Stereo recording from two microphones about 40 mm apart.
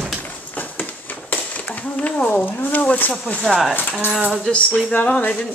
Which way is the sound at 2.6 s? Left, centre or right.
Left.